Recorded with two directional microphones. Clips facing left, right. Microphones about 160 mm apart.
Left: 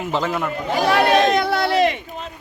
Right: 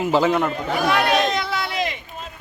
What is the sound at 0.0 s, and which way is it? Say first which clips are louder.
Speech: right 4 dB; 5° right (ahead or behind).